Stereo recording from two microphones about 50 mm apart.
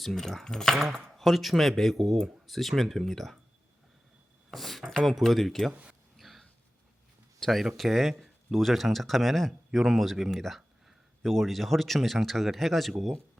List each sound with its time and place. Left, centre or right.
0.0 s speech: centre
4.5 s speech: centre
5.7 s speech: right
6.1 s a sound: centre
7.3 s speech: centre